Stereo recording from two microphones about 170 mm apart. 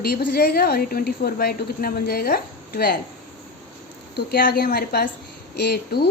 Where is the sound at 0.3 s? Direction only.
65° left (ahead or behind).